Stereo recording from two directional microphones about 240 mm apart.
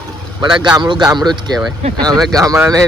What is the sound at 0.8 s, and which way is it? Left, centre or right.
Speech, centre.